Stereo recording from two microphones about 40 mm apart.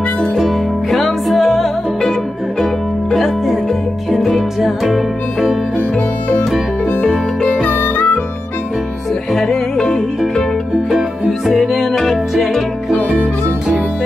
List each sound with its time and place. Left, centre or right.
0.4 s music: centre
3.2 s music: centre
5.8 s music: left
7.8 s music: left
9.3 s music: centre
10.9 s music: centre